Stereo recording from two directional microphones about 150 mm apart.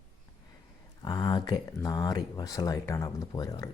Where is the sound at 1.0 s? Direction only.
25° left (ahead or behind).